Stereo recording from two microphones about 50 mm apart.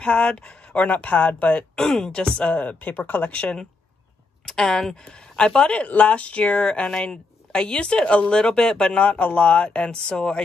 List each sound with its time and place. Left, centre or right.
0.0 s speech: left
0.8 s speech: left
1.8 s speech: centre
2.3 s speech: left
4.5 s speech: centre
9.0 s speech: left